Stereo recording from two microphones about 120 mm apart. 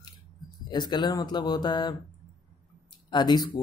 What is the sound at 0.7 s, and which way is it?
Speech, 40° left (ahead or behind).